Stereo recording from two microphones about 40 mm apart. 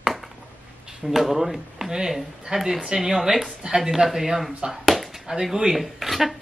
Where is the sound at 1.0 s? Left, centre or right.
Centre.